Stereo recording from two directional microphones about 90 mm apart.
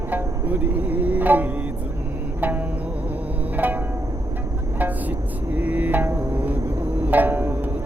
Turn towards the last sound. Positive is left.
turn(degrees=-20)  # may be behind; listen again after turning